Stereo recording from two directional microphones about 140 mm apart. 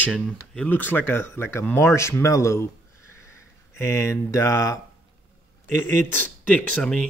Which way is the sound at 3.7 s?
20° left (ahead or behind).